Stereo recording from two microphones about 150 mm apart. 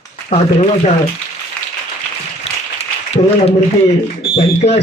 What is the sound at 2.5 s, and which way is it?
Applause, 45° left (ahead or behind).